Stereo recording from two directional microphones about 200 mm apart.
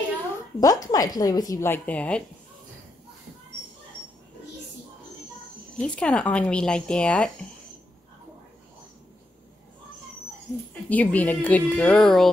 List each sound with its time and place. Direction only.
0.6 s a woman's voice: 15° left (ahead or behind)
5.8 s speech: 5° left (ahead or behind)
10.7 s a woman's voice: 5° left (ahead or behind)